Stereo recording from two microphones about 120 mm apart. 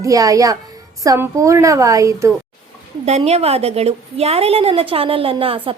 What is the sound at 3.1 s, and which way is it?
A woman's voice, 60° right (ahead or behind).